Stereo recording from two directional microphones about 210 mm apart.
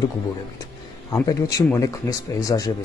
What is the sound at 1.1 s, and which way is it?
Speech, 15° left (ahead or behind).